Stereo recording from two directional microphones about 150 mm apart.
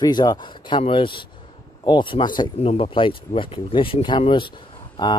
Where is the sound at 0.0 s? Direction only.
25° left (ahead or behind).